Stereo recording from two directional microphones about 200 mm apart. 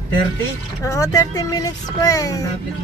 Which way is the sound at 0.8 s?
15° left (ahead or behind).